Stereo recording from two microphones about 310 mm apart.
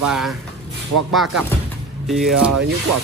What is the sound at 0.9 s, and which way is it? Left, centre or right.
Speech, right.